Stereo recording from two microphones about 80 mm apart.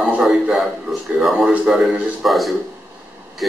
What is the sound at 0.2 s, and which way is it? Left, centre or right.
A man's voice, centre.